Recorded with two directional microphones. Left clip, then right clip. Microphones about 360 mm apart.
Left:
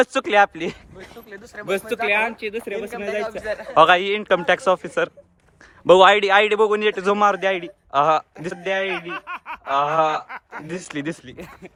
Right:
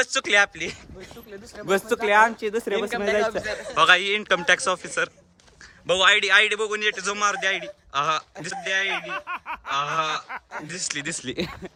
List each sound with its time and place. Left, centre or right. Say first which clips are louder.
0.0 s a man's voice: left 4 dB; centre
1.6 s speech: even; left
2.0 s speech: right 3 dB; centre
2.9 s a man's voice: right 3 dB; right
3.8 s a man's voice: left 4 dB; centre